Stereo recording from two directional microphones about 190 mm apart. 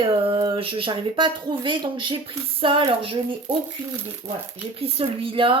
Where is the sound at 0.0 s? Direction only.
25° right (ahead or behind).